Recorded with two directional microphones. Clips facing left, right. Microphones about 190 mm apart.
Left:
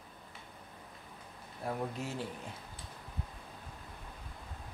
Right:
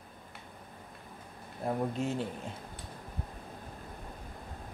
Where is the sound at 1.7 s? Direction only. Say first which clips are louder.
Right 5 dB; 25° right (ahead or behind).